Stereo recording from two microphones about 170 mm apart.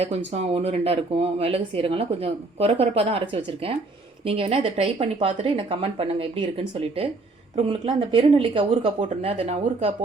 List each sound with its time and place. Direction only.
0.0 s a woman's voice: 35° right (ahead or behind)